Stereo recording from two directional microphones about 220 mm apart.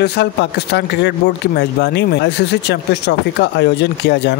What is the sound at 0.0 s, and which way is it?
Speech, 50° left (ahead or behind).